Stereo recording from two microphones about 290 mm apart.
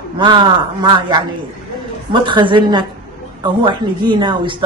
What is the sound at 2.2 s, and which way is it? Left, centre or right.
Speech, centre.